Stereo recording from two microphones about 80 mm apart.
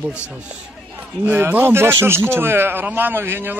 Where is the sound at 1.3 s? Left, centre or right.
Right.